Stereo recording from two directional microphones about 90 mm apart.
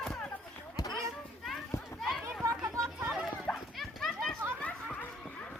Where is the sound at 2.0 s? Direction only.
Centre (ahead or behind).